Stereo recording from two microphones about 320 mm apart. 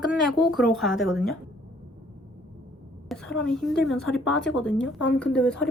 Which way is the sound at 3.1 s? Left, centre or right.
Centre.